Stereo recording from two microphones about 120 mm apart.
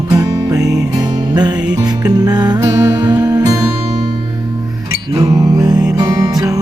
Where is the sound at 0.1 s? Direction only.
30° right (ahead or behind).